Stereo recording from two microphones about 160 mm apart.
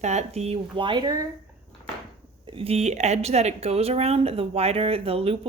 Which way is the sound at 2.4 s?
35° right (ahead or behind).